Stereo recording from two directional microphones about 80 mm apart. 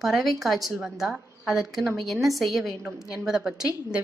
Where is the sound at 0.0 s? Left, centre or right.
Centre.